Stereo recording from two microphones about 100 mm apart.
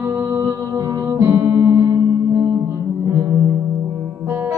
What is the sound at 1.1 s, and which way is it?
Music, 25° right (ahead or behind).